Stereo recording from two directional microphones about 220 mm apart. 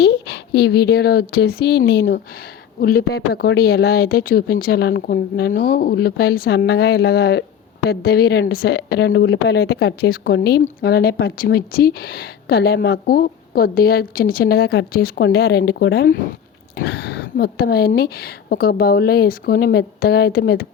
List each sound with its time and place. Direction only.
0.0 s speech: 50° left (ahead or behind)